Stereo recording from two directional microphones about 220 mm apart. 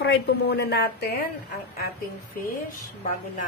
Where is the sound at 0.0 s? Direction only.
50° left (ahead or behind).